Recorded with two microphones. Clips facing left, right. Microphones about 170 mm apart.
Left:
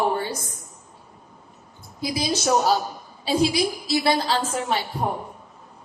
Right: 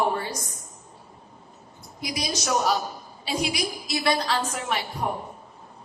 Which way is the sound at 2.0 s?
30° left (ahead or behind).